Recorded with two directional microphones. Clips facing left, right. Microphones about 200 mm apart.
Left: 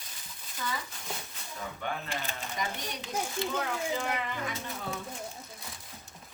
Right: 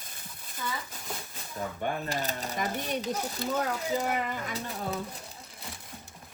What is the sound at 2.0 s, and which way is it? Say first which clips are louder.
Speech: right 5 dB; 40° right (ahead or behind).